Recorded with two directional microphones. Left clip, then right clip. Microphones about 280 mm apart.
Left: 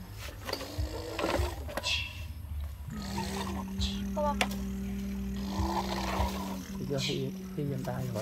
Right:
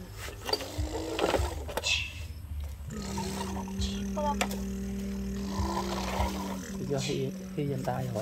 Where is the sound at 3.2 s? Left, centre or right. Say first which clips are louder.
Even; centre.